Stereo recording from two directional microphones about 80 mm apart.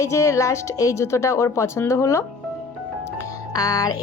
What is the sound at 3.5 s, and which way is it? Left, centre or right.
Speech, left.